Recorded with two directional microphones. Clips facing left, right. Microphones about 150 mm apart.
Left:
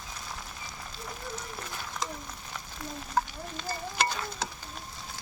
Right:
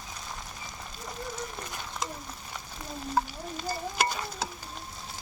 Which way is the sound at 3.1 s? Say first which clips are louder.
Right 1 dB; 10° right (ahead or behind).